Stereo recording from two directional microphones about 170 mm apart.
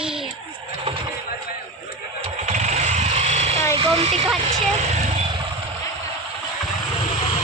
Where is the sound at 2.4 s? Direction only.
40° right (ahead or behind).